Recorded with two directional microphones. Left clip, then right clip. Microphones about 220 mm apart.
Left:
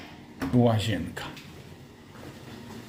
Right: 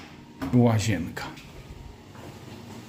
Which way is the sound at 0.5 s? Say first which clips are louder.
Right 1 dB; 25° right (ahead or behind).